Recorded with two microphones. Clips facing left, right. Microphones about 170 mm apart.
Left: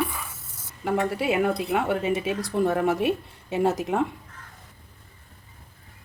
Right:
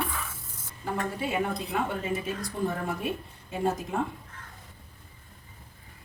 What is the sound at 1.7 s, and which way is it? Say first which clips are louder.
A woman's voice: left 6 dB; 75° left (ahead or behind).